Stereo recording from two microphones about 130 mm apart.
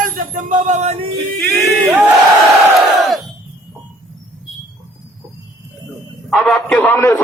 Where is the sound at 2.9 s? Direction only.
Centre (ahead or behind).